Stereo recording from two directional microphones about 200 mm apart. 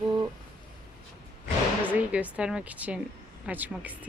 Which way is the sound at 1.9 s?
5° right (ahead or behind).